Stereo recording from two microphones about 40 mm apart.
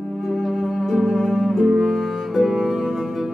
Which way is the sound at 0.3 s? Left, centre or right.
Centre.